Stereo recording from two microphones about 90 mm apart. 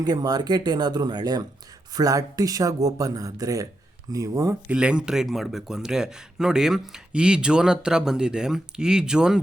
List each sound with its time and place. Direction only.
0.0 s speech: 45° right (ahead or behind)
4.7 s speech: 10° right (ahead or behind)